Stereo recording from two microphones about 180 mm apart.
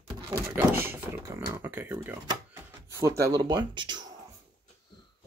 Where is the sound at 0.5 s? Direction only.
10° right (ahead or behind).